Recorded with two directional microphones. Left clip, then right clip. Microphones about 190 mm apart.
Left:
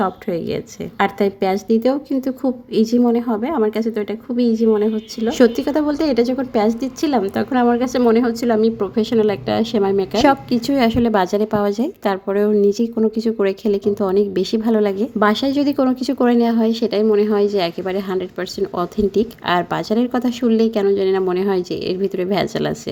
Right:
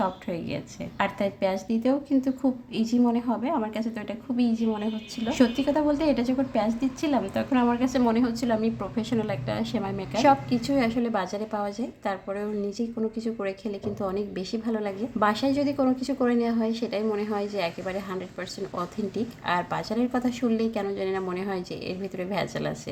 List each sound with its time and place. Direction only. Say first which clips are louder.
0.0 s a woman's voice: left 8 dB; 35° left (ahead or behind)